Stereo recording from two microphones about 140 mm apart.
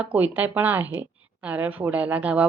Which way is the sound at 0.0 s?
10° right (ahead or behind).